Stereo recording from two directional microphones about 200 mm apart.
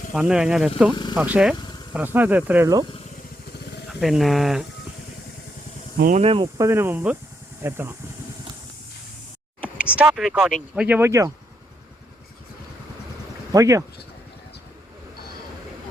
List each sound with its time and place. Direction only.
0.1 s speech: 5° right (ahead or behind)
3.8 s speech: centre (ahead or behind)
6.0 s speech: 40° right (ahead or behind)
6.2 s speech: 25° right (ahead or behind)
6.6 s speech: 15° right (ahead or behind)
9.9 s speech: 5° right (ahead or behind)
13.5 s speech: 15° right (ahead or behind)